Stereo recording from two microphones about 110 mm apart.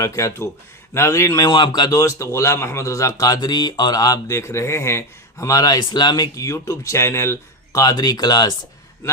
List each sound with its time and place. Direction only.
0.0 s a man's voice: 30° left (ahead or behind)
1.5 s speech: 45° left (ahead or behind)